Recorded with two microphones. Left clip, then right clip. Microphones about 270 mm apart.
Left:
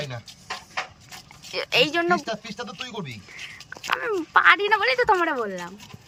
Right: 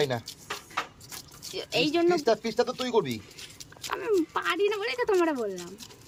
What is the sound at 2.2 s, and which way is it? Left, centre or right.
Speech, right.